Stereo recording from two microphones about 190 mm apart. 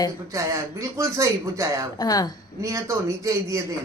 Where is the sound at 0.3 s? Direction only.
15° right (ahead or behind).